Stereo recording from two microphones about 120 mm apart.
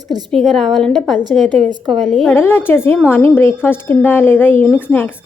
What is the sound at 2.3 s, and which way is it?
A woman's voice, 20° left (ahead or behind).